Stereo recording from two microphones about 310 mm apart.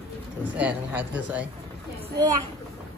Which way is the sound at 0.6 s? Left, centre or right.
Centre.